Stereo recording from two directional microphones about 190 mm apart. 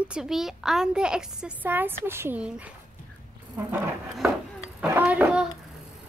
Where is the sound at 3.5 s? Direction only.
10° right (ahead or behind).